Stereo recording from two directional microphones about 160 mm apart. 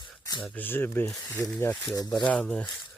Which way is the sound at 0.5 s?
10° left (ahead or behind).